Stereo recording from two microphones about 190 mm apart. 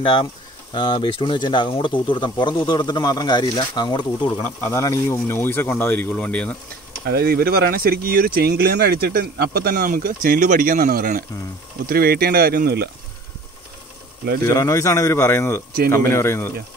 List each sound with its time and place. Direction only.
0.0 s speech: 25° left (ahead or behind); by 6.5 s 5° left (ahead or behind)
7.1 s speech: 55° right (ahead or behind)
14.4 s speech: 15° left (ahead or behind)